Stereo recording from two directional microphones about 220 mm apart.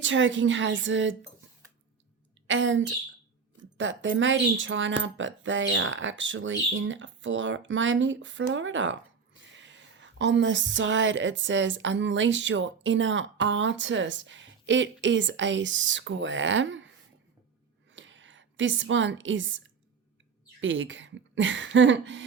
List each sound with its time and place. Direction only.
0.0 s speech: 55° right (ahead or behind)
2.5 s speech: 60° right (ahead or behind)
17.9 s a sound: 55° right (ahead or behind)
20.6 s speech: 60° right (ahead or behind)